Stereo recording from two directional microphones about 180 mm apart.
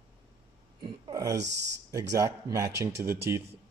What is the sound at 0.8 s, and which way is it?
Speech, 20° right (ahead or behind).